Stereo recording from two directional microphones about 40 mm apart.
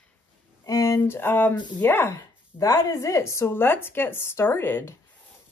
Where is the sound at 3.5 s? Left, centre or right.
Left.